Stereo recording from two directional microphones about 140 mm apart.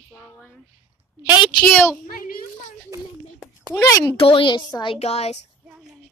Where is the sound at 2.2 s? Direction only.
90° left.